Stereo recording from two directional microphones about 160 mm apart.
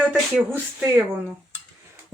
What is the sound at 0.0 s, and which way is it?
Speech, 10° right (ahead or behind).